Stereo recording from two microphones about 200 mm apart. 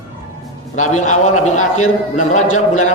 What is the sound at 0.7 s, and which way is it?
A man's voice, 40° left (ahead or behind).